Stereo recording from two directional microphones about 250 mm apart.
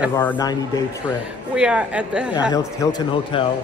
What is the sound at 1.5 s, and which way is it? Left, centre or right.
Speech, centre.